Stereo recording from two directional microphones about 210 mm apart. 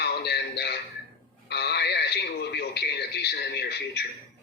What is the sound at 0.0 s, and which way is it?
A man's voice, 50° left (ahead or behind).